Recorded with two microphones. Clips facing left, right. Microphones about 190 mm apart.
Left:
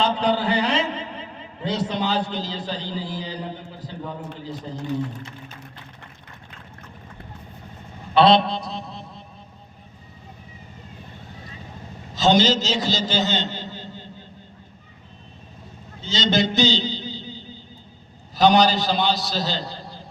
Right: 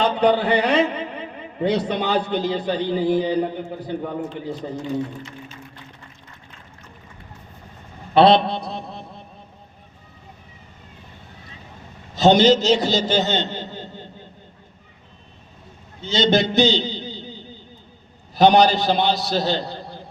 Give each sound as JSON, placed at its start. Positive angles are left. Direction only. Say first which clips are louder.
{"t": 0.0, "sound": "a man's voice", "louder": "right 3 dB", "side_deg": -60}
{"t": 8.1, "sound": "a man's voice", "louder": "right 2 dB", "side_deg": -55}
{"t": 12.1, "sound": "a man's voice", "louder": "right 4 dB", "side_deg": -60}
{"t": 16.0, "sound": "a man's voice", "louder": "right 3 dB", "side_deg": -60}